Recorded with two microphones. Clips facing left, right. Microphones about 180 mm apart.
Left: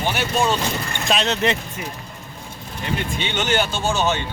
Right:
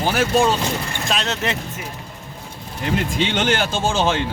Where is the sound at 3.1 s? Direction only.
90° right.